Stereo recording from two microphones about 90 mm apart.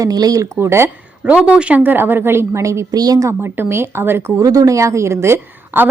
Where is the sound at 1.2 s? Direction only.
10° right (ahead or behind); by 3.3 s 45° right (ahead or behind).